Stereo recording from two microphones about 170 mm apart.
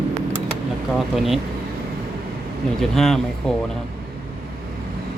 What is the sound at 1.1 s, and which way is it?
Speech, centre (ahead or behind).